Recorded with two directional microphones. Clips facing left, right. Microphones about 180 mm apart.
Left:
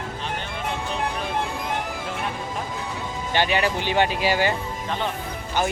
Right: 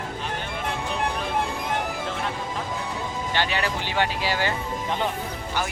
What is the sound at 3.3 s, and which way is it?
Speech, 15° left (ahead or behind).